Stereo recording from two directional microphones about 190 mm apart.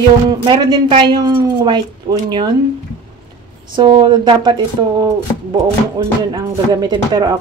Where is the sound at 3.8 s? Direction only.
25° right (ahead or behind).